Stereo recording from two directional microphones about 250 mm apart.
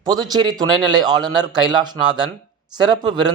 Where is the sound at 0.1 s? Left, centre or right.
Centre.